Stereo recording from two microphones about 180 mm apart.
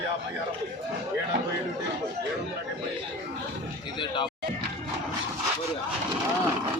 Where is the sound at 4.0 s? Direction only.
25° left (ahead or behind).